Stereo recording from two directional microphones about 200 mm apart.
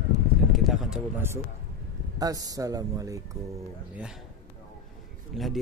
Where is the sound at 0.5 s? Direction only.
Centre (ahead or behind).